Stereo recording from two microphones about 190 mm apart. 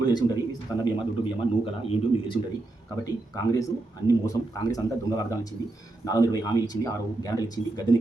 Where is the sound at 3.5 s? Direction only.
15° left (ahead or behind).